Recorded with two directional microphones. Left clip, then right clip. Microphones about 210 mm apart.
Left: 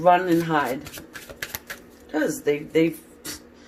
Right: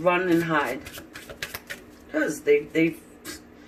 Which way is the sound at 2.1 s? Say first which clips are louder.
Right 2 dB; 35° left (ahead or behind).